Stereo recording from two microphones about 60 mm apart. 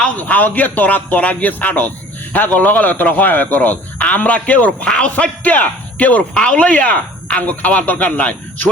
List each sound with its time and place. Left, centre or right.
0.2 s speech: left